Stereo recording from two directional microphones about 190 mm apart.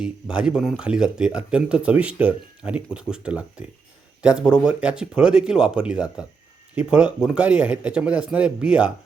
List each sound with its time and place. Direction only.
0.0 s speech: 5° right (ahead or behind)